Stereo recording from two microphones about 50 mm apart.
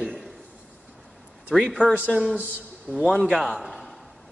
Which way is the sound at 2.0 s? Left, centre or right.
Right.